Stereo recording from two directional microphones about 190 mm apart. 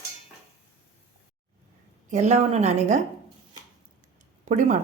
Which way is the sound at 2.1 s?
35° right (ahead or behind).